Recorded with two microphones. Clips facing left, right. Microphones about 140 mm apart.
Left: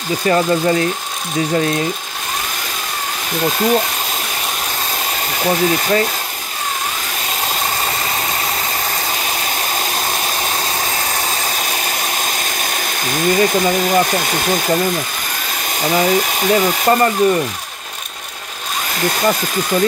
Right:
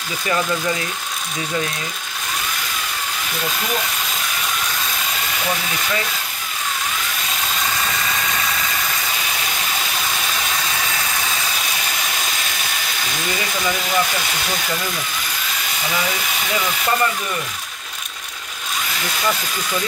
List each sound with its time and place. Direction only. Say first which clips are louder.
0.3 s speech: left 7 dB; 40° left (ahead or behind)
3.4 s speech: left 10 dB; 35° left (ahead or behind)
5.4 s speech: left 11 dB; 40° left (ahead or behind)
7.8 s a sound: left 3 dB; 35° left (ahead or behind)
9.9 s vacuum cleaner: left 4 dB; 40° left (ahead or behind)
13.1 s speech: left 12 dB; 45° left (ahead or behind)
15.8 s speech: left 10 dB; 40° left (ahead or behind)
19.0 s speech: left 7 dB; 45° left (ahead or behind)